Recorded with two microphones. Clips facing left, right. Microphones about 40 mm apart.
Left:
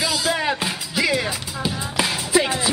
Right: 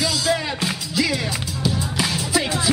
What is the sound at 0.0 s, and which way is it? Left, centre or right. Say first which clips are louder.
Music: even; centre.